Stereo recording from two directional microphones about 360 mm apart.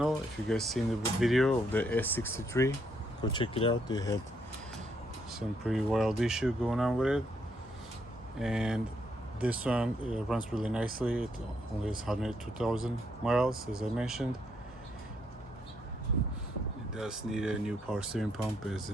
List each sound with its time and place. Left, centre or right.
0.0 s speech: centre
5.3 s speech: centre
8.4 s speech: centre
16.9 s speech: centre